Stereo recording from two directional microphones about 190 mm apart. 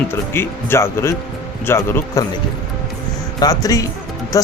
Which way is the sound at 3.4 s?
20° left (ahead or behind).